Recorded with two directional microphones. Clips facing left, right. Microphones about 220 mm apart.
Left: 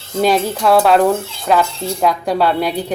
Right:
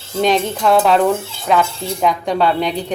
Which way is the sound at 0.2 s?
5° left (ahead or behind).